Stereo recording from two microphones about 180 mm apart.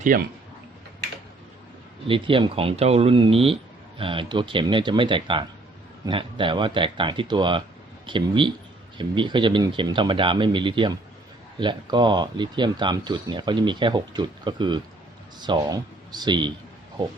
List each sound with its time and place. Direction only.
0.1 s speech: 50° right (ahead or behind)
2.0 s speech: 30° right (ahead or behind)